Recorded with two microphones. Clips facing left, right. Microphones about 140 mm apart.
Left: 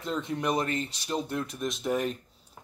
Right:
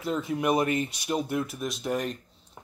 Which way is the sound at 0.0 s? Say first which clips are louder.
Right 3 dB; 5° right (ahead or behind).